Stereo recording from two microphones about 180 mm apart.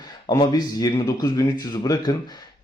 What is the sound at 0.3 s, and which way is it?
Speech, 20° left (ahead or behind).